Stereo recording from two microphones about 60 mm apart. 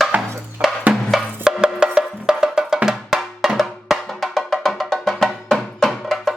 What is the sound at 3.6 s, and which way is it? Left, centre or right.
Music, centre.